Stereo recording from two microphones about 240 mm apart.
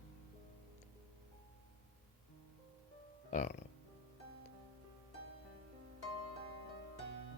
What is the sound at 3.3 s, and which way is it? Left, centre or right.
Speech, left.